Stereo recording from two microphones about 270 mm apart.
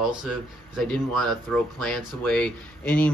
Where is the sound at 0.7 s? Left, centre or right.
Centre.